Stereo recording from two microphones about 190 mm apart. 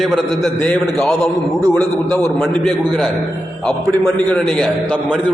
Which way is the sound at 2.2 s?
Centre (ahead or behind).